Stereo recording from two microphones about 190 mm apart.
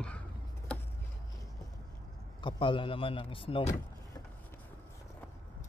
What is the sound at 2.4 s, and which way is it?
A man's voice, 25° left (ahead or behind).